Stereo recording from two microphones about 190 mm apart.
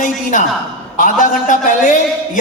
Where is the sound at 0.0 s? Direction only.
45° left (ahead or behind).